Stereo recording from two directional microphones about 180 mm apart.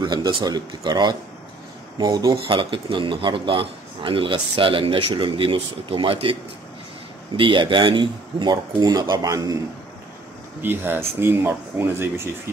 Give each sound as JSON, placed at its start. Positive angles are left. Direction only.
{"t": 0.0, "sound": "a man's voice", "side_deg": -25}
{"t": 7.3, "sound": "a man's voice", "side_deg": -30}
{"t": 10.6, "sound": "speech", "side_deg": -10}